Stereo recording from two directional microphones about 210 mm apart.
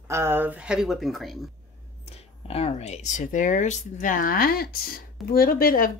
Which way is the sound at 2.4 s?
30° left (ahead or behind).